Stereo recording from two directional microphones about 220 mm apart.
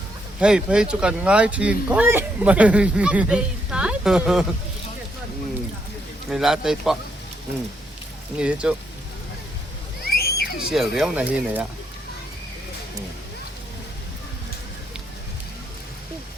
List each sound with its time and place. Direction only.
0.3 s speech: 5° right (ahead or behind)
6.3 s speech: centre (ahead or behind)
8.4 s speech: 5° right (ahead or behind)
10.1 s a sound: 45° left (ahead or behind)
10.6 s speech: centre (ahead or behind)